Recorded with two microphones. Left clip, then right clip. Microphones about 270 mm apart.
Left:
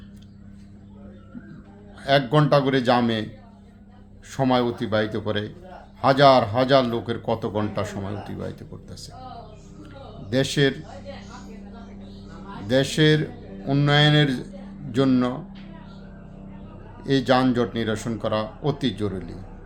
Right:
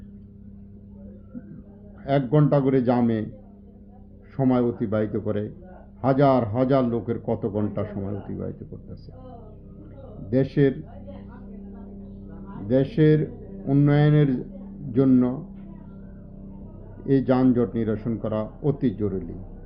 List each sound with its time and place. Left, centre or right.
2.0 s a man's voice: centre
4.4 s a man's voice: centre
10.2 s a man's voice: centre
12.6 s a man's voice: centre
17.1 s a man's voice: centre